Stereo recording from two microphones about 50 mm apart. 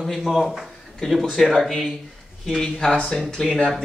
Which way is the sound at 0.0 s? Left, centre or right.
Centre.